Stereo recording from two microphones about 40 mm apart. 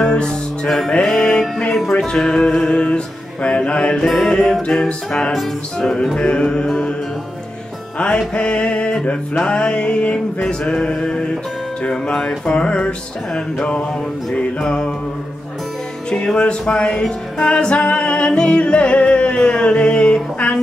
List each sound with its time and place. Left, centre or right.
0.0 s music: left
0.7 s music: centre
8.0 s music: left
16.3 s music: left